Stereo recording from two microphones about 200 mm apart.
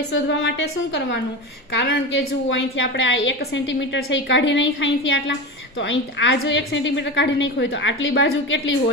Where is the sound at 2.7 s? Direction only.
75° left (ahead or behind).